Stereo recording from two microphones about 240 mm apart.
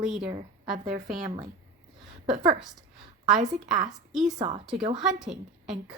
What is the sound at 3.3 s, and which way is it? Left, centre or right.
Speech, right.